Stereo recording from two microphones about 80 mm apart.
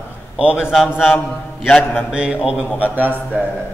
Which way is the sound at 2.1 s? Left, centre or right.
Centre.